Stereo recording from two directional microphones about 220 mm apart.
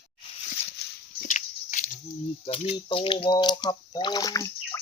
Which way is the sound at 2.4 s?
25° left (ahead or behind).